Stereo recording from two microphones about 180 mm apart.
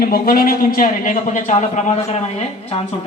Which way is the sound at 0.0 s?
55° left (ahead or behind).